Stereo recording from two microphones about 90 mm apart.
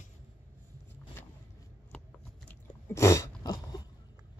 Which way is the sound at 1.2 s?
25° left (ahead or behind).